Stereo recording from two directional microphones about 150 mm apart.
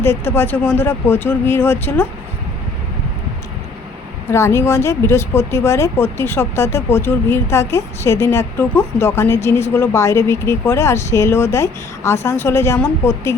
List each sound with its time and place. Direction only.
0.0 s speech: 15° left (ahead or behind)
4.3 s speech: 15° left (ahead or behind)